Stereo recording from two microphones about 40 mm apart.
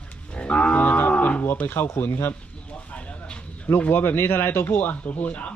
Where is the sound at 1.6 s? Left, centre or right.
Left.